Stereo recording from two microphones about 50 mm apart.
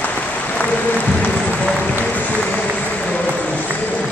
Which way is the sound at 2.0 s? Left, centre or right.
Left.